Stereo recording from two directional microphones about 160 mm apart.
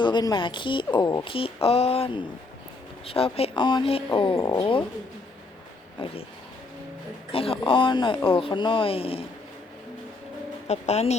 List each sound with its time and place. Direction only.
0.0 s speech: 25° left (ahead or behind)
6.0 s speech: 35° left (ahead or behind)
7.3 s speech: 35° left (ahead or behind)
10.7 s speech: 45° left (ahead or behind)